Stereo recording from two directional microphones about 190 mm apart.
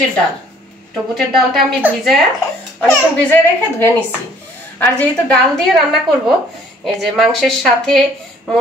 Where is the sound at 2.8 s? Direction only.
10° left (ahead or behind).